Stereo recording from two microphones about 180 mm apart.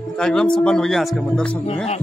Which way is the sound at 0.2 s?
5° left (ahead or behind).